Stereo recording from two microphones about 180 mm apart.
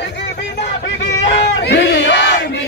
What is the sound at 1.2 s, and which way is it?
Battle cry, 70° left (ahead or behind).